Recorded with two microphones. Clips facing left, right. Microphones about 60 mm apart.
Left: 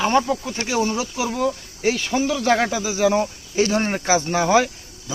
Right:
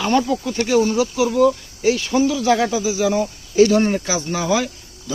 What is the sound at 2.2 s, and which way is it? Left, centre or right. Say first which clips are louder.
Speech: left 1 dB; left.